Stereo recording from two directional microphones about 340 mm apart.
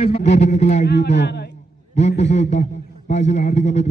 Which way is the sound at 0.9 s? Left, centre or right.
Left.